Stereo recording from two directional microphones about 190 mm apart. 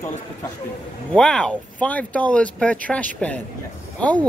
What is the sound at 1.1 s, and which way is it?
Speech, 5° left (ahead or behind).